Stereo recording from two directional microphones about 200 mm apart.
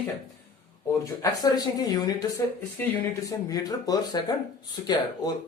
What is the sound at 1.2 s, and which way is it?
Speech, 20° left (ahead or behind).